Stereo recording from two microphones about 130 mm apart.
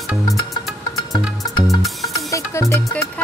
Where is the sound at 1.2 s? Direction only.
Centre (ahead or behind).